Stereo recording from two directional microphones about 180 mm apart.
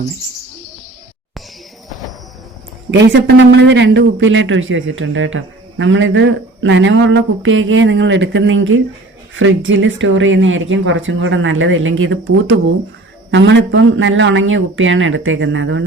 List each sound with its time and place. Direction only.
2.9 s speech: 75° right (ahead or behind)
13.3 s speech: 75° right (ahead or behind)